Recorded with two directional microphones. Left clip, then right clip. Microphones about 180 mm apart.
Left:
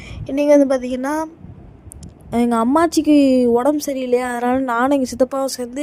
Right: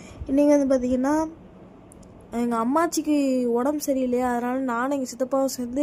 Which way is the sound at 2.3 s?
45° left (ahead or behind).